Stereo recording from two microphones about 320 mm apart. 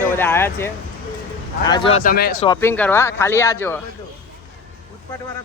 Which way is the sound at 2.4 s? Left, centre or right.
Centre.